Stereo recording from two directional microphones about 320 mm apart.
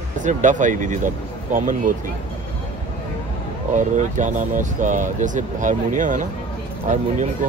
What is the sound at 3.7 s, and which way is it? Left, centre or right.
Speech, right.